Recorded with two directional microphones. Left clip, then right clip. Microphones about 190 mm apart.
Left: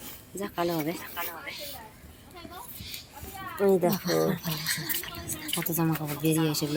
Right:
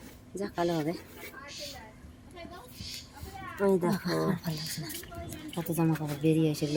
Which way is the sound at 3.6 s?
30° right (ahead or behind).